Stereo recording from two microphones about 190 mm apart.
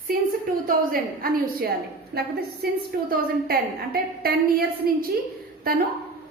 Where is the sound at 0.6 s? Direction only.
50° right (ahead or behind).